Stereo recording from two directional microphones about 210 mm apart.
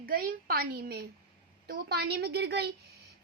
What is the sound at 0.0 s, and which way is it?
A woman's voice, 45° right (ahead or behind).